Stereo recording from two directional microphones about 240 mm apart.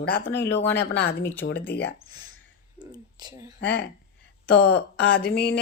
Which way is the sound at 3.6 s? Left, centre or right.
Left.